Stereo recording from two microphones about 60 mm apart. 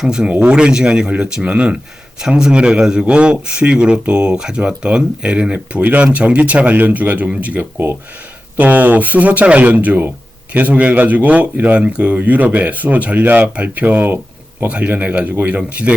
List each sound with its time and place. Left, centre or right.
0.0 s a man's voice: centre